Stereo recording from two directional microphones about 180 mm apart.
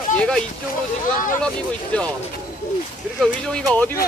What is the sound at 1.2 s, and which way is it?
Speech, 45° left (ahead or behind).